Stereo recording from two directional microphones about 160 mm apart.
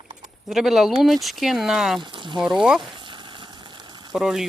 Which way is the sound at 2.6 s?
5° right (ahead or behind).